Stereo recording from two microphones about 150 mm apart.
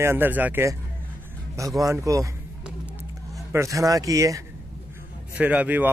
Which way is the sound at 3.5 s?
20° right (ahead or behind).